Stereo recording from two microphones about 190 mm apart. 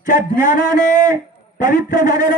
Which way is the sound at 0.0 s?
45° left (ahead or behind).